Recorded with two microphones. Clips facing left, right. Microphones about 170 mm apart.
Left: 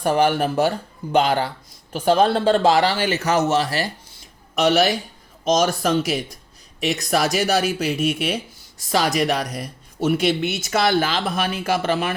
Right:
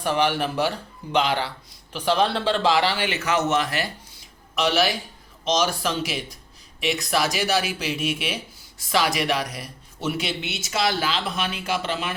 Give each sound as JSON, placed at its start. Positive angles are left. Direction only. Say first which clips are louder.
{"t": 0.0, "sound": "speech", "louder": "left 4 dB", "side_deg": 45}
{"t": 4.5, "sound": "speech", "louder": "left 5 dB", "side_deg": 45}